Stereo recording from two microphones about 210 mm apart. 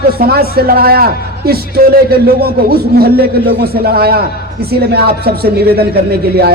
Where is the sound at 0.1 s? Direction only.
45° right (ahead or behind).